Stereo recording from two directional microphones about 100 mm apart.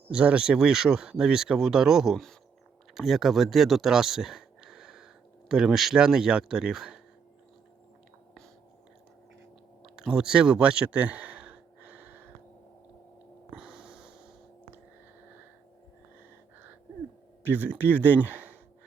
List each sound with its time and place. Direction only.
0.1 s speech: 10° right (ahead or behind)
9.9 s a sound: 10° right (ahead or behind)
13.6 s snort: 5° right (ahead or behind)
17.4 s speech: 20° right (ahead or behind)